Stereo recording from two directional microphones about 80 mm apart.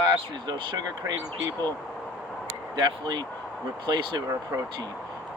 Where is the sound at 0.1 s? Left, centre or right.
Right.